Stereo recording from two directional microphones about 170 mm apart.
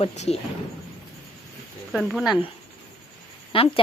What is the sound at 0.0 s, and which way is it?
Speech, 40° left (ahead or behind).